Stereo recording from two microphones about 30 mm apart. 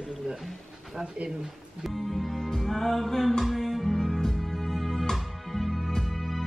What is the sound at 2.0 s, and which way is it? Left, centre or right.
Music, centre.